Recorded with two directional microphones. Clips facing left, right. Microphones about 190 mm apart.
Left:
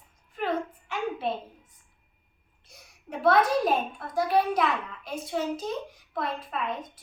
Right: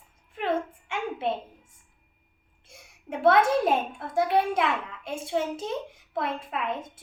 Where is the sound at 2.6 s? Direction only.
25° right (ahead or behind).